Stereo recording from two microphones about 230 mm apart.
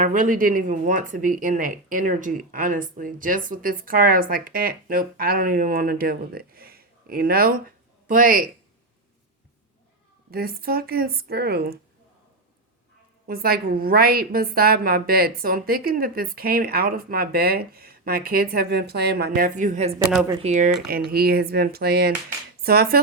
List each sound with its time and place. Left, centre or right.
0.0 s a woman's voice: right
10.3 s a woman's voice: right
13.2 s a woman's voice: right
20.8 s a woman's voice: right